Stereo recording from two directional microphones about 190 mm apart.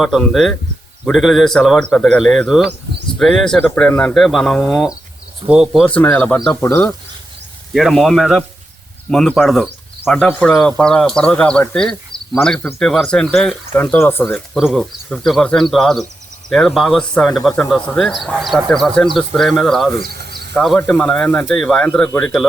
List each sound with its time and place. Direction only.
0.0 s speech: centre (ahead or behind)
5.9 s speech: 5° left (ahead or behind)
6.6 s speech: 15° left (ahead or behind)
7.7 s speech: centre (ahead or behind)
20.0 s snake: 55° right (ahead or behind)
20.6 s speech: 5° left (ahead or behind)